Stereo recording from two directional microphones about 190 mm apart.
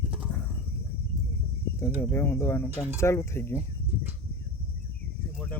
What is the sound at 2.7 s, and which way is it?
Speech, 10° right (ahead or behind).